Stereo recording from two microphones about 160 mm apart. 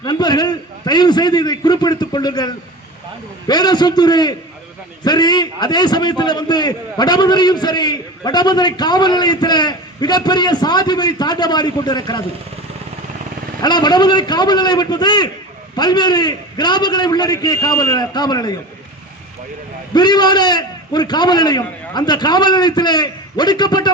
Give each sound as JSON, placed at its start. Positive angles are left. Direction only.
{"t": 0.0, "sound": "a man's voice", "side_deg": 25}
{"t": 13.6, "sound": "a man's voice", "side_deg": 25}
{"t": 19.9, "sound": "a man's voice", "side_deg": 25}